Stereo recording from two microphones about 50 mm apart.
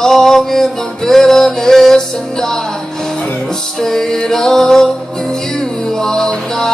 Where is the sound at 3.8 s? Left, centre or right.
Centre.